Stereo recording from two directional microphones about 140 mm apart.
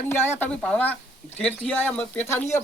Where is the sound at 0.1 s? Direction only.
15° left (ahead or behind).